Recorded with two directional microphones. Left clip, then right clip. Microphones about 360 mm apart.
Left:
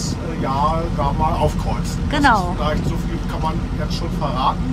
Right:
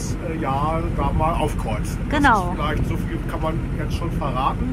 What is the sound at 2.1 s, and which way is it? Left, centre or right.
Speech, centre.